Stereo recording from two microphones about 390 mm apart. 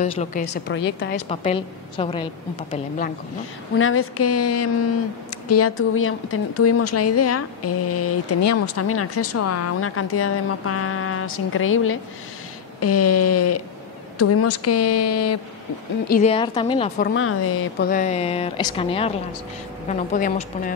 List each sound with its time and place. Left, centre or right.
0.0 s a woman's voice: centre
1.3 s speech: centre
3.7 s a woman's voice: left
16.1 s speech: centre
17.0 s a woman's voice: left